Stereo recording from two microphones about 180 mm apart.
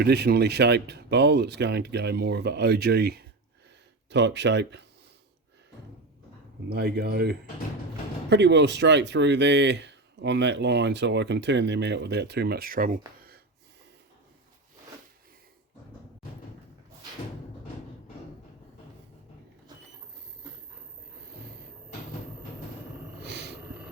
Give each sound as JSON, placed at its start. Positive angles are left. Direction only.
{"t": 0.0, "sound": "speech", "side_deg": -65}
{"t": 4.1, "sound": "speech", "side_deg": -75}
{"t": 6.7, "sound": "speech", "side_deg": -65}
{"t": 8.3, "sound": "speech", "side_deg": -75}
{"t": 23.2, "sound": "a sound", "side_deg": -70}